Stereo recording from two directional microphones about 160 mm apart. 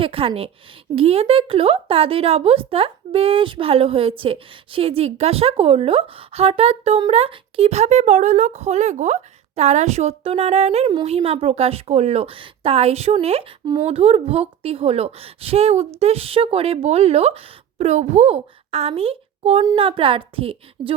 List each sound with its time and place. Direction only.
0.0 s a woman's voice: 35° right (ahead or behind)